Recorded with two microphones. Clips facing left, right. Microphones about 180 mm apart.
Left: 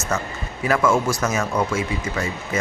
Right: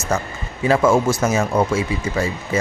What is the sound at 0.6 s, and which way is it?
Speech, 25° right (ahead or behind).